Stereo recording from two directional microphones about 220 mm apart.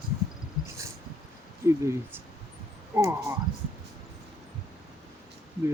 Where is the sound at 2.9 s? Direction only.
10° right (ahead or behind).